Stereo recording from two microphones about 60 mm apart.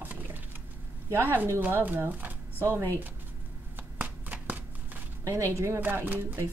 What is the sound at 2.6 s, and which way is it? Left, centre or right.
Speech, right.